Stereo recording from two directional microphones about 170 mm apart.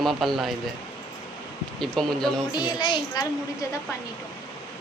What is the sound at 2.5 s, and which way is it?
Speech, 25° left (ahead or behind).